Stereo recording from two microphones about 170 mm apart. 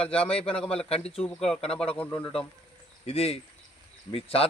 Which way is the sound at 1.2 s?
5° left (ahead or behind).